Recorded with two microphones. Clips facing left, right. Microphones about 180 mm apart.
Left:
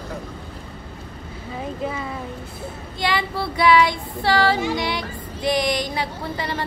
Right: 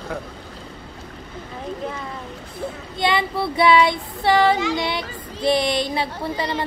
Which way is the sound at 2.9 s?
20° right (ahead or behind).